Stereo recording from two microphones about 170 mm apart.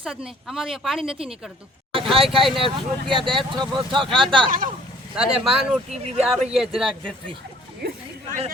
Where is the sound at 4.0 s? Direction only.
Centre (ahead or behind).